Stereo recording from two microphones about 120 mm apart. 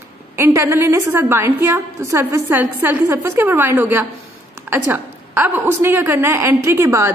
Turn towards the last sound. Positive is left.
turn(degrees=-25)  # may be behind; listen again after turning